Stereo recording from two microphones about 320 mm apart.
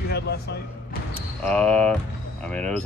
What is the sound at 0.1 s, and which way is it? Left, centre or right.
Speech, left.